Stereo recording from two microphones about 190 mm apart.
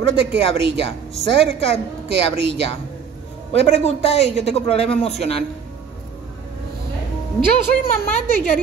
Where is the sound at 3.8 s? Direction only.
35° left (ahead or behind).